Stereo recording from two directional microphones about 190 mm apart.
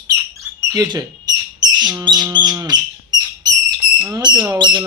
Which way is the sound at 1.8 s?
20° right (ahead or behind).